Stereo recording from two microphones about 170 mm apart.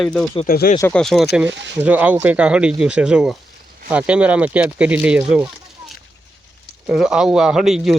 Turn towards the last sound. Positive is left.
turn(degrees=0)  # may be behind; listen again after turning